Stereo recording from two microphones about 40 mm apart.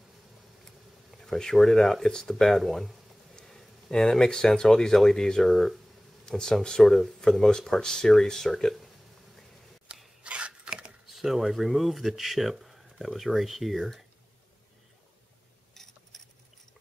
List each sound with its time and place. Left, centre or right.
0.7 s speech: centre
3.3 s speech: centre
6.2 s speech: centre
9.9 s filing: right
10.2 s chopping: right
11.1 s speech: centre
15.7 s a sound: centre